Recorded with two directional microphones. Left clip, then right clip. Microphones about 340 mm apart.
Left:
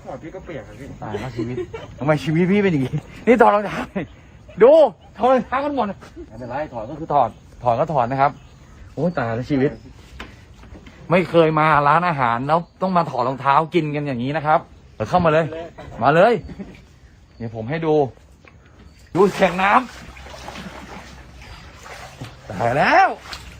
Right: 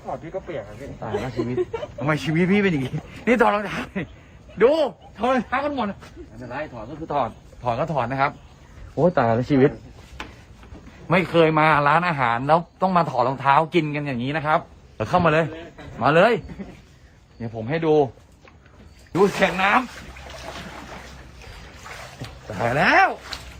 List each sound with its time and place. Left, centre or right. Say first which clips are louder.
0.1 s speech: right 3 dB; centre
2.0 s a man's voice: left 4 dB; centre
7.1 s a man's voice: left 6 dB; centre
9.0 s speech: right 4 dB; centre
11.1 s a man's voice: left 2 dB; centre
17.4 s speech: even; centre
19.1 s a man's voice: left 3 dB; centre
20.3 s boat: left 1 dB; centre
22.4 s a man's voice: left 2 dB; centre